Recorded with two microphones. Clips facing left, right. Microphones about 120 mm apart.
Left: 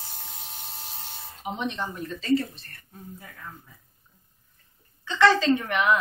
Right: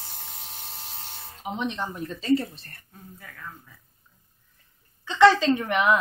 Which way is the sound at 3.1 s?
20° left (ahead or behind).